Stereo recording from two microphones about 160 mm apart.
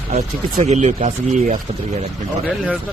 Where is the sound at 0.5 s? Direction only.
45° right (ahead or behind).